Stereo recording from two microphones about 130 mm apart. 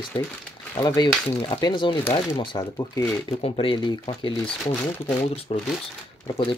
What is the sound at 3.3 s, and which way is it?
Speech, 50° left (ahead or behind).